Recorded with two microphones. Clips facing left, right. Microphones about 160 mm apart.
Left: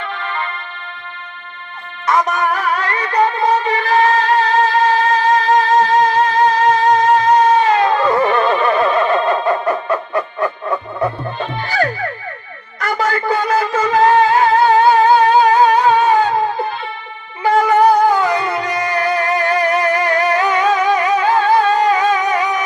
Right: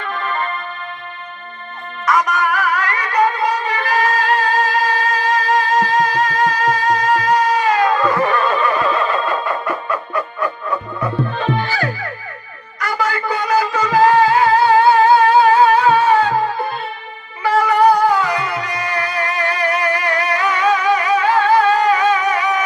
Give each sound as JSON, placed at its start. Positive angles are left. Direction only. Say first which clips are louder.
{"t": 0.0, "sound": "music", "louder": "right 2 dB", "side_deg": -45}
{"t": 2.0, "sound": "music", "louder": "left 1 dB", "side_deg": 25}
{"t": 12.8, "sound": "a sound", "louder": "left 2 dB", "side_deg": 30}
{"t": 13.6, "sound": "music", "louder": "right 2 dB", "side_deg": 25}
{"t": 17.4, "sound": "music", "louder": "left 2 dB", "side_deg": 25}